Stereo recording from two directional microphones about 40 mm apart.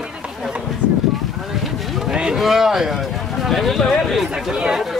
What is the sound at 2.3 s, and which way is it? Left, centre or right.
Speech, centre.